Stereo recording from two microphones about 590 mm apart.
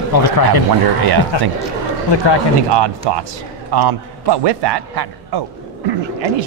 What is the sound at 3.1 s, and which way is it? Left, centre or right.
Speech, right.